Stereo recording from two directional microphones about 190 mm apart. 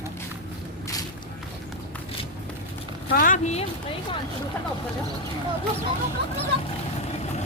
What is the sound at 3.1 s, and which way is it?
Speech, 45° left (ahead or behind).